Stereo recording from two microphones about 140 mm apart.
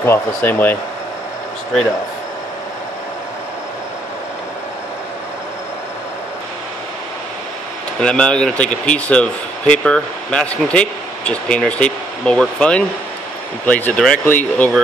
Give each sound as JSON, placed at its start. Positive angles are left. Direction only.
{"t": 0.0, "sound": "speech", "side_deg": 15}
{"t": 8.0, "sound": "speech", "side_deg": 5}